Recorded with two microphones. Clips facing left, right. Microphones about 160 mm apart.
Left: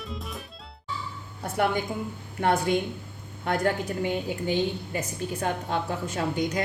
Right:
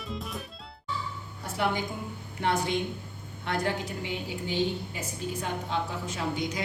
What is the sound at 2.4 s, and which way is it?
A woman's voice, 50° left (ahead or behind).